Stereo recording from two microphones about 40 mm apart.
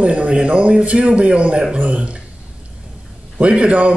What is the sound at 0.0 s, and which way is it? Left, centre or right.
A man's voice, right.